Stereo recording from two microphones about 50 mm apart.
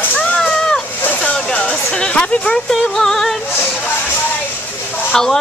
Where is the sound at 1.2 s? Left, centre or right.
Centre.